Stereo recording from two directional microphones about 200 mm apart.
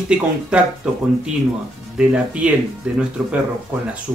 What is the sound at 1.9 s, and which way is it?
Speech, 5° right (ahead or behind).